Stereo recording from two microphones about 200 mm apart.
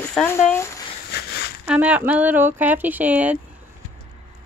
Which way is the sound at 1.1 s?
55° left (ahead or behind).